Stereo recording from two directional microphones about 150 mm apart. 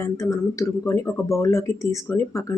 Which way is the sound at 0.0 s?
20° left (ahead or behind).